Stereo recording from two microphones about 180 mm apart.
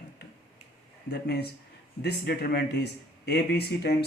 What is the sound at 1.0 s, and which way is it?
Speech, 65° left (ahead or behind).